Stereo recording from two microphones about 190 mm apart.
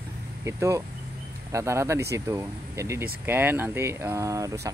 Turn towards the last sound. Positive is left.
turn(degrees=-15)  # may be behind; listen again after turning